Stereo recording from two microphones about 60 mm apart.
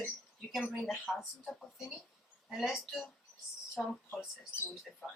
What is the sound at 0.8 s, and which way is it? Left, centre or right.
Speech, centre.